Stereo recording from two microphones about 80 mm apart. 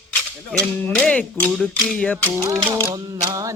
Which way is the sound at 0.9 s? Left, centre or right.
Centre.